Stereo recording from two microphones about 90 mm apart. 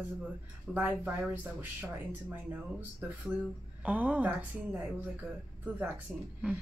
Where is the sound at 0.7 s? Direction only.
20° right (ahead or behind).